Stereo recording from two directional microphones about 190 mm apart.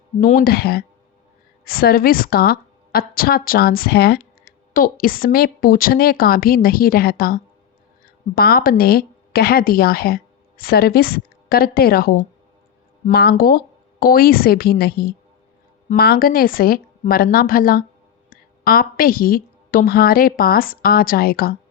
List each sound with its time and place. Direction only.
0.2 s a woman's voice: 50° left (ahead or behind)